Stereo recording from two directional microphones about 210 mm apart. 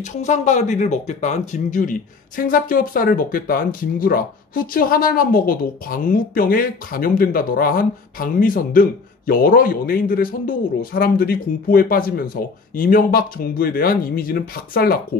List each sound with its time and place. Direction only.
0.0 s speech: 35° left (ahead or behind)